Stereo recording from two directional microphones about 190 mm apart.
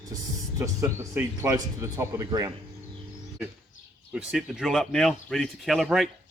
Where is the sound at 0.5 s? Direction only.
15° right (ahead or behind).